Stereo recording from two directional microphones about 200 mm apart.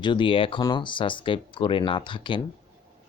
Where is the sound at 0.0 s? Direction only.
25° left (ahead or behind).